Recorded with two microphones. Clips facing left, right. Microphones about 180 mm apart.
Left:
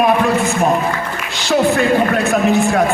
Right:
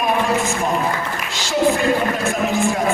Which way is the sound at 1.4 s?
65° left (ahead or behind).